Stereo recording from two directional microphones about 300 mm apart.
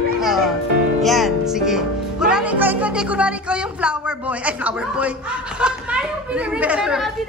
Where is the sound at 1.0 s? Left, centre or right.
Centre.